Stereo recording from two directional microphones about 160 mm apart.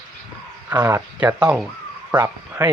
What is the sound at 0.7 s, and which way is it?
Speech, 15° right (ahead or behind).